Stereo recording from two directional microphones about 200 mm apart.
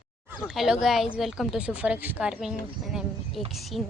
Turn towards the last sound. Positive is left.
turn(degrees=0)  # may be behind; listen again after turning